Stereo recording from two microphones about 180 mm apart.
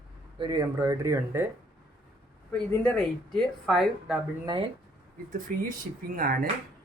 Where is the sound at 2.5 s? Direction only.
5° left (ahead or behind).